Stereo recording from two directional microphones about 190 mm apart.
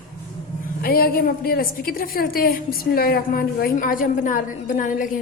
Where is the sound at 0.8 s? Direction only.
50° left (ahead or behind).